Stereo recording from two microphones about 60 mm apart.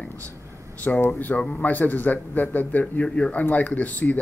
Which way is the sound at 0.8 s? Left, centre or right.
Left.